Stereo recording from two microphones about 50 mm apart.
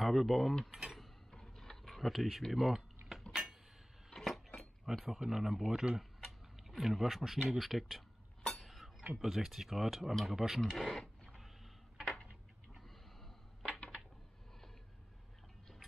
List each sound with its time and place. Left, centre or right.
0.0 s speech: centre
0.7 s speech: centre
1.3 s typing: centre
4.1 s chink: centre
4.9 s speech: centre
5.9 s tick-tock: centre
7.4 s speech: centre
8.5 s chink: centre
9.1 s speech: centre
10.8 s a sound: centre